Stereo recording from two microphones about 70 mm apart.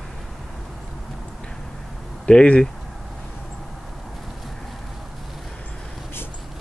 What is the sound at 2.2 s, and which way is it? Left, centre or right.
Speech, centre.